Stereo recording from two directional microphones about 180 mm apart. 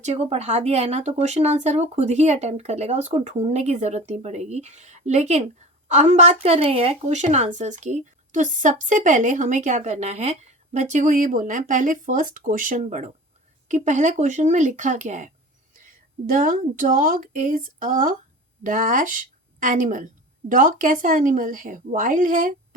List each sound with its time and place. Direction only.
0.0 s a woman's voice: 40° right (ahead or behind)